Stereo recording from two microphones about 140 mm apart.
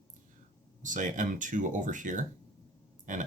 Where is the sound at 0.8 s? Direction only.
65° right (ahead or behind).